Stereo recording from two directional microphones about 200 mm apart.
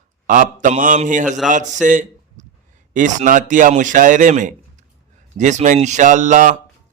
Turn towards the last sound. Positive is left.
turn(degrees=-40)  # may be behind; listen again after turning